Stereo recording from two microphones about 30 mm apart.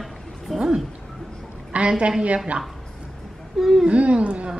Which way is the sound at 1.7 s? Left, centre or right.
Right.